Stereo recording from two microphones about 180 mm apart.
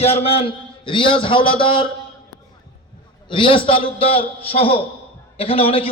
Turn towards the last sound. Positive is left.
turn(degrees=30)  # may be behind; listen again after turning